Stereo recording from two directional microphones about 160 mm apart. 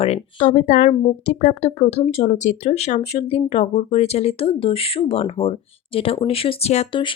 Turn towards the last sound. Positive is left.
turn(degrees=30)  # may be behind; listen again after turning